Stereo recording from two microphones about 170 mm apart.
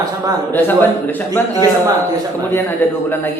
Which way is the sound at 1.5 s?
20° right (ahead or behind).